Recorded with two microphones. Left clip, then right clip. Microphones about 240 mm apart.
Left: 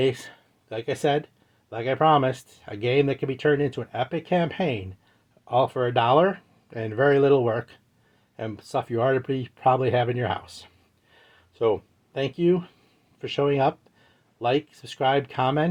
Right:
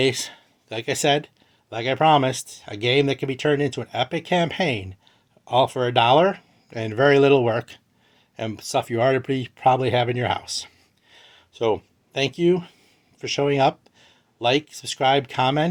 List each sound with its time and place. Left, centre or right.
0.0 s speech: right
11.1 s a sound: right
13.1 s speech: centre